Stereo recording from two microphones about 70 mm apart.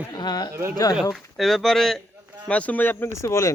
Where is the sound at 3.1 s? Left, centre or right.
Left.